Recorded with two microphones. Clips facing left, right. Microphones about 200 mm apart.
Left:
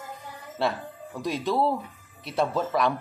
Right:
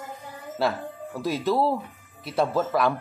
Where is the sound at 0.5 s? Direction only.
5° right (ahead or behind).